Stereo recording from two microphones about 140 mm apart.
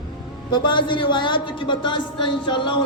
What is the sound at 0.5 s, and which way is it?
Speech, 35° left (ahead or behind).